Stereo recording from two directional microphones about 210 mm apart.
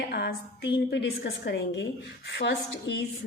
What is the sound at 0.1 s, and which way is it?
A woman's voice, 50° left (ahead or behind).